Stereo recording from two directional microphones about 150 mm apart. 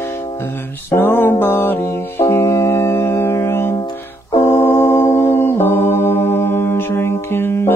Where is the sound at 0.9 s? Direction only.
15° left (ahead or behind).